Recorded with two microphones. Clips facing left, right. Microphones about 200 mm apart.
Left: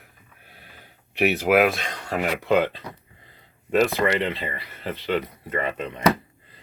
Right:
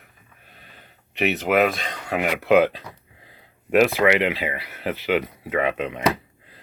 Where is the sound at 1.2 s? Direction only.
5° left (ahead or behind).